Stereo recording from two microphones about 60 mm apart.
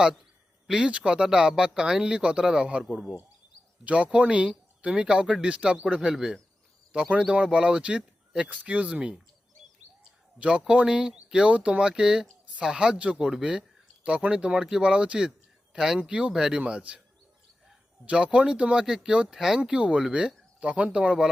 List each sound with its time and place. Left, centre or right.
0.7 s speech: centre
3.8 s speech: centre
10.3 s speech: centre
18.0 s speech: centre